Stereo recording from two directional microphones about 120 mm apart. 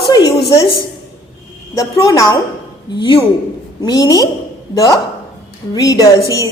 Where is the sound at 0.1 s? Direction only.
30° left (ahead or behind).